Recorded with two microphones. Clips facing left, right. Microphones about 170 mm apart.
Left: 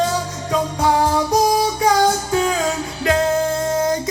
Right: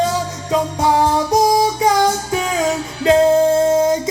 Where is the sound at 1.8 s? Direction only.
20° right (ahead or behind).